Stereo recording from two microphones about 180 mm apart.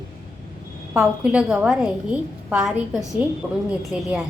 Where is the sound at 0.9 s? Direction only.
5° right (ahead or behind).